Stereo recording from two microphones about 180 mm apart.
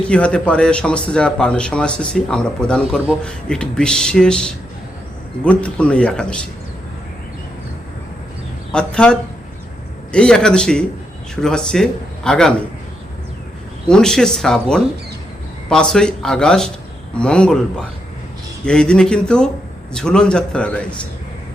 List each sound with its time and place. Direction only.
0.1 s a man's voice: 5° left (ahead or behind)
8.7 s a man's voice: 5° left (ahead or behind)
13.8 s a man's voice: 5° left (ahead or behind)
18.6 s a man's voice: 5° left (ahead or behind)